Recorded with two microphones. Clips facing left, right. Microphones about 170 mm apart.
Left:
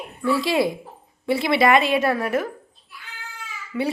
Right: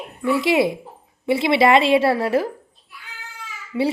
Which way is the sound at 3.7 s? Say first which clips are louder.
Right 4 dB; 20° right (ahead or behind).